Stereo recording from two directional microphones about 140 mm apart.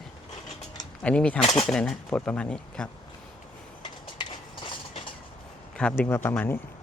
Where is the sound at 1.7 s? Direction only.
5° left (ahead or behind).